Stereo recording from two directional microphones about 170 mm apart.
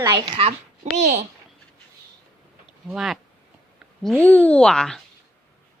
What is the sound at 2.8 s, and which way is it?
Speech, 5° right (ahead or behind).